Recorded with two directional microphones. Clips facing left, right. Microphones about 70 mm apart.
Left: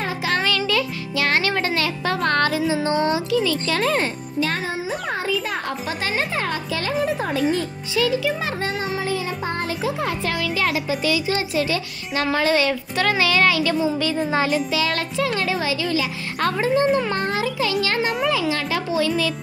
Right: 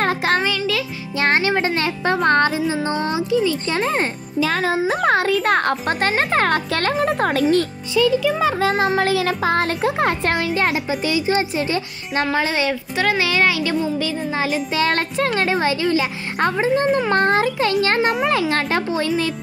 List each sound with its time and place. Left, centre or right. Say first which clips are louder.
0.0 s music: right 5 dB; right
1.1 s music: right 3 dB; right
3.8 s speech: even; right
5.0 s a child's voice: right 9 dB; right
8.8 s music: right 7 dB; right
9.8 s speech: right 5 dB; right
12.4 s a woman's voice: left 1 dB; centre
13.2 s music: even; centre
13.9 s a woman's voice: left 1 dB; centre
14.7 s speech: right 3 dB; right
16.4 s music: right 2 dB; centre
17.1 s a child's voice: right 6 dB; right